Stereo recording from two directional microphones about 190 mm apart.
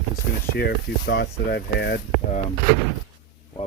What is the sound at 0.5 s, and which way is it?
Speech, 60° left (ahead or behind).